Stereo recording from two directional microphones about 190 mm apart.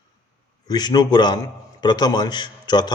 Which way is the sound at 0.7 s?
20° left (ahead or behind).